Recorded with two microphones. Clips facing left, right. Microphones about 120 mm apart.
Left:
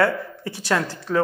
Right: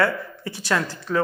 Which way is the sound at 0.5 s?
55° left (ahead or behind).